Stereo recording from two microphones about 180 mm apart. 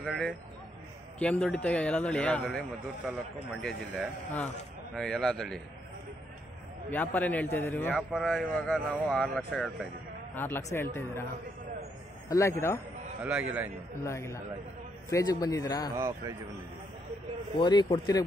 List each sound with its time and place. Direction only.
0.0 s a man's voice: 5° left (ahead or behind)
6.9 s a man's voice: 10° left (ahead or behind)
7.9 s a man's voice: centre (ahead or behind)
12.3 s a man's voice: 15° left (ahead or behind)
13.2 s a man's voice: 5° right (ahead or behind)
14.0 s a man's voice: 15° left (ahead or behind)
16.0 s a man's voice: 15° right (ahead or behind)
17.6 s speech: 25° left (ahead or behind)